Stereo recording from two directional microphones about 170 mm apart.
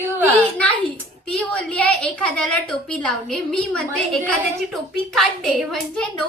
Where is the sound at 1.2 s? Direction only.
5° left (ahead or behind).